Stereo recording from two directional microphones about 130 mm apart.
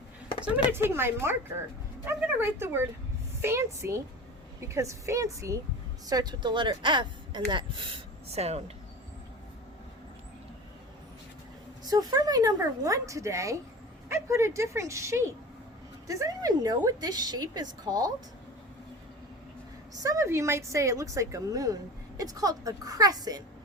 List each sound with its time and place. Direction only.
0.7 s a woman's voice: 20° right (ahead or behind); by 8.7 s 55° right (ahead or behind)
11.9 s a woman's voice: 30° right (ahead or behind)
20.0 s a woman's voice: 25° right (ahead or behind)